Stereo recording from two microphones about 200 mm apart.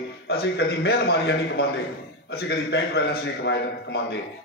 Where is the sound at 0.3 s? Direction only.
55° left (ahead or behind).